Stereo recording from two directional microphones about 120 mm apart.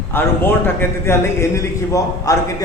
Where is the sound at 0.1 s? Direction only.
20° left (ahead or behind).